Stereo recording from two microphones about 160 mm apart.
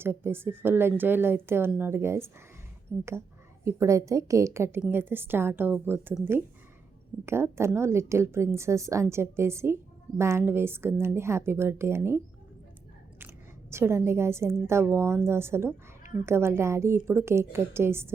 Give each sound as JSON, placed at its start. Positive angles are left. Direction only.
{"t": 0.0, "sound": "a woman's voice", "side_deg": -15}